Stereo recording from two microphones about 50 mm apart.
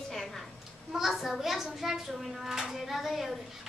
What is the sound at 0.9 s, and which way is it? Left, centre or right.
A child's voice, centre.